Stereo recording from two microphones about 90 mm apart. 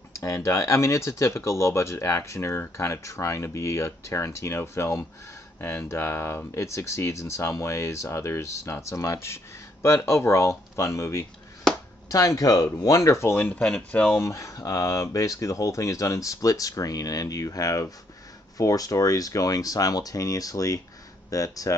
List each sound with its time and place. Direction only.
0.2 s speech: 35° left (ahead or behind)
13.7 s speech: 10° left (ahead or behind)
14.0 s speech: 30° left (ahead or behind)